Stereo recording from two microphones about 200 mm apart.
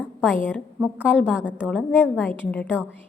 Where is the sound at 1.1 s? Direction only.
5° left (ahead or behind).